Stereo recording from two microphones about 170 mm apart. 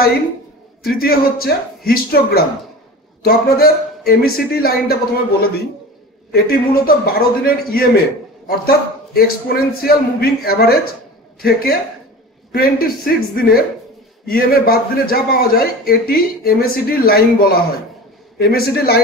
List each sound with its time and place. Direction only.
0.9 s a man's voice: 60° left (ahead or behind)
6.3 s a man's voice: 60° left (ahead or behind)